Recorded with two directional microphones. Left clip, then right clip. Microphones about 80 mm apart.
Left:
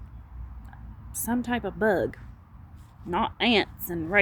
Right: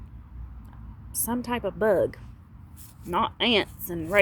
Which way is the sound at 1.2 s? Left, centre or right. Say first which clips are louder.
Even; centre.